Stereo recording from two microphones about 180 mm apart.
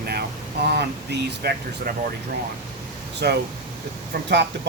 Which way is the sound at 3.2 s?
65° right (ahead or behind).